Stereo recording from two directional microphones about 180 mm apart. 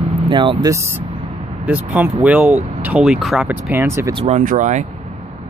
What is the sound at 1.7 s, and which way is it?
Speech, 10° right (ahead or behind).